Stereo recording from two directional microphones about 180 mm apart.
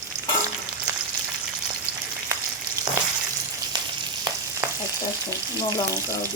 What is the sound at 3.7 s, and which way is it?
Frying, 25° right (ahead or behind).